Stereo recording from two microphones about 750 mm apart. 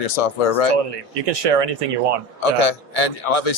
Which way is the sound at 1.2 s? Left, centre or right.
Right.